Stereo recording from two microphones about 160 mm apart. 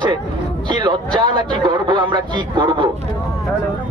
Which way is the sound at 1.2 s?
30° right (ahead or behind).